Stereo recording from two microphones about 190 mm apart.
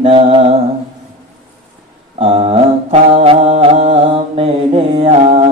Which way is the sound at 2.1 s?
35° right (ahead or behind).